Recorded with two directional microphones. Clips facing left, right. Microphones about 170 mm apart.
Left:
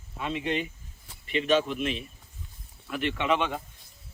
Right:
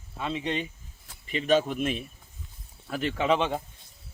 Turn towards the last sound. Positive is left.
turn(degrees=-30)  # may be behind; listen again after turning